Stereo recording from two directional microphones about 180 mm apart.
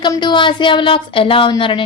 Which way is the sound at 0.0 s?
25° left (ahead or behind).